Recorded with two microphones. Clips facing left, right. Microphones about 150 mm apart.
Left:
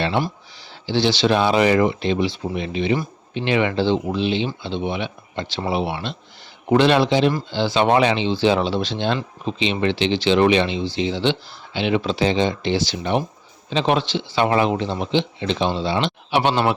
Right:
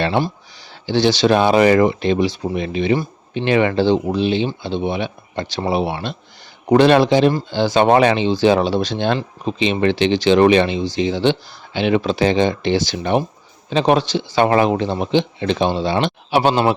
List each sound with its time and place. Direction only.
0.9 s speech: 45° right (ahead or behind)